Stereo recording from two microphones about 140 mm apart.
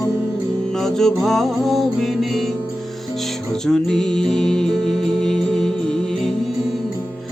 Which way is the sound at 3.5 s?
5° left (ahead or behind).